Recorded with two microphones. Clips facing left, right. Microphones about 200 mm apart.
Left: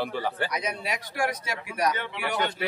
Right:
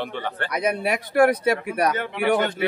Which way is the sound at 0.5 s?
60° right (ahead or behind).